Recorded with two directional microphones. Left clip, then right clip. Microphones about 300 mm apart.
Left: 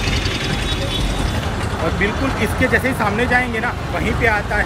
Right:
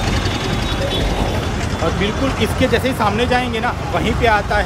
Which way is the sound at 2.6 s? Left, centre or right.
Centre.